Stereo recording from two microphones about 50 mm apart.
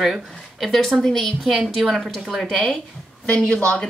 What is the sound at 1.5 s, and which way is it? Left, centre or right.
Speech, centre.